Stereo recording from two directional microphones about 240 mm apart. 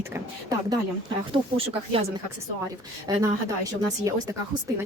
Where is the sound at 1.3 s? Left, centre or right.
Right.